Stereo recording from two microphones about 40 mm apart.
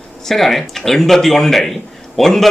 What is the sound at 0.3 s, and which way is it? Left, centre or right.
Speech, centre.